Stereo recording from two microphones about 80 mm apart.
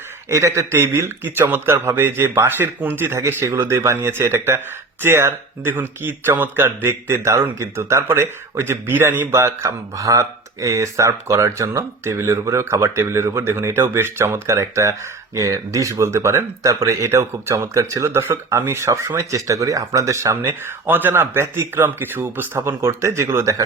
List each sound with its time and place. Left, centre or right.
0.3 s speech: right